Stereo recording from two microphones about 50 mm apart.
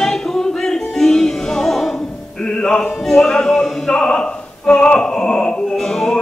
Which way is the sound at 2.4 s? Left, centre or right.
Centre.